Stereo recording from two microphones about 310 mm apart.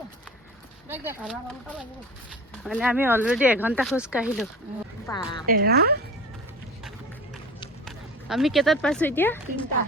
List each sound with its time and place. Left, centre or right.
0.9 s speech: centre
5.0 s speech: centre
5.5 s a woman's voice: right
7.9 s speech: centre